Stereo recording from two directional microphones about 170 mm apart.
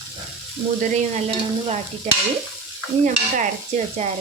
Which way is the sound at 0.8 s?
40° right (ahead or behind).